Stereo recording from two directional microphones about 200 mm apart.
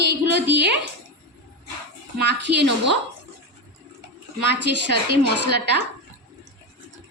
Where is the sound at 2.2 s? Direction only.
60° right (ahead or behind).